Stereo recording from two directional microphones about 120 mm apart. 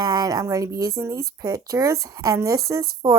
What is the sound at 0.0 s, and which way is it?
Speech, 30° right (ahead or behind).